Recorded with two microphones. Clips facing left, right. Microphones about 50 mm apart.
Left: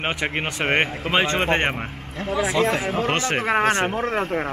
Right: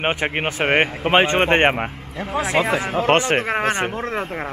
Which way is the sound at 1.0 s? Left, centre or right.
Right.